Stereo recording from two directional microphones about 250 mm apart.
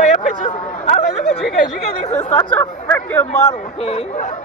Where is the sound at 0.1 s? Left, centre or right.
Left.